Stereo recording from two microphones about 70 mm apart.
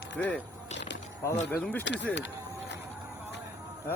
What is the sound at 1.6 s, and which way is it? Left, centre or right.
Speech, centre.